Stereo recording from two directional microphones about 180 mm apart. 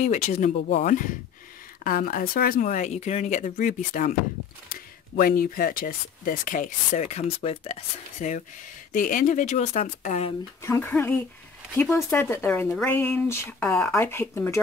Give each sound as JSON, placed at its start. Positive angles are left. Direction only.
{"t": 0.0, "sound": "speech", "side_deg": 40}
{"t": 10.6, "sound": "speech", "side_deg": 15}